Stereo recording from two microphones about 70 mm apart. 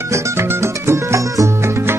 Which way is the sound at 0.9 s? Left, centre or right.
Right.